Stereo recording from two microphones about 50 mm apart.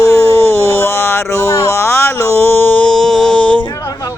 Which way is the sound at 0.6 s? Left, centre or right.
Left.